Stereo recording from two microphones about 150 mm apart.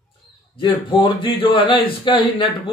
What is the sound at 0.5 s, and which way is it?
Speech, 30° left (ahead or behind).